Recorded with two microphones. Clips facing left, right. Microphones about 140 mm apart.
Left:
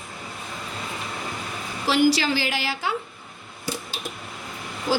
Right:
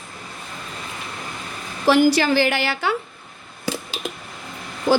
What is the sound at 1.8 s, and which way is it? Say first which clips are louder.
A woman's voice: right 4 dB; 55° right (ahead or behind).